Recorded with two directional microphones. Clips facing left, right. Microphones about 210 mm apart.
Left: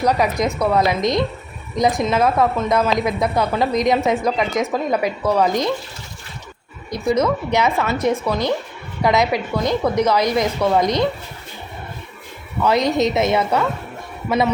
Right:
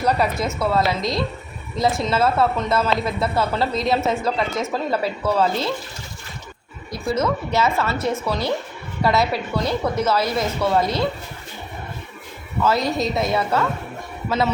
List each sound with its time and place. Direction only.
0.0 s a woman's voice: 15° left (ahead or behind)
6.9 s a woman's voice: 15° left (ahead or behind)
12.6 s a woman's voice: 20° left (ahead or behind)